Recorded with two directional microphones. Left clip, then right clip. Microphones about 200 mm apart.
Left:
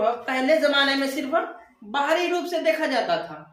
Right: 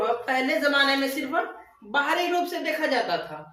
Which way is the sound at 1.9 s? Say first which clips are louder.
Left 1 dB; 20° left (ahead or behind).